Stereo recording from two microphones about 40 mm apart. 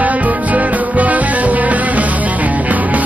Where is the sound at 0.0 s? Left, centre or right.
Right.